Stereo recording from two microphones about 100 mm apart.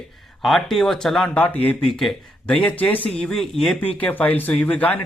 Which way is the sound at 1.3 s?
15° left (ahead or behind).